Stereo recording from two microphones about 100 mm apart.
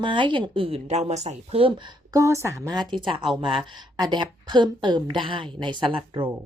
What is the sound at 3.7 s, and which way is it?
A woman's voice, 45° right (ahead or behind).